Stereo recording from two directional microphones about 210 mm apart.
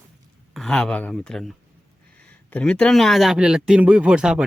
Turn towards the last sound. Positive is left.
turn(degrees=-5)  # may be behind; listen again after turning